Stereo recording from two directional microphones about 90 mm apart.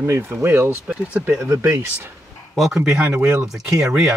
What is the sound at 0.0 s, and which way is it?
Speech, 30° right (ahead or behind).